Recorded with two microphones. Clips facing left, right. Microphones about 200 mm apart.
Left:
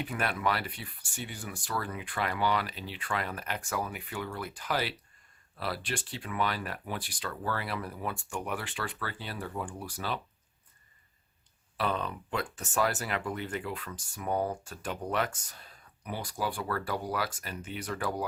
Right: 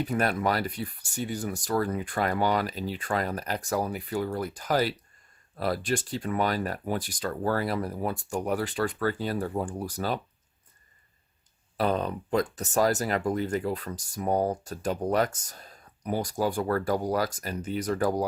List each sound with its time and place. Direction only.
0.0 s speech: 40° right (ahead or behind)
11.8 s speech: 40° right (ahead or behind)